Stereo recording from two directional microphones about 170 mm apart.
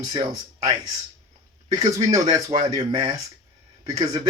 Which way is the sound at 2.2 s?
35° right (ahead or behind).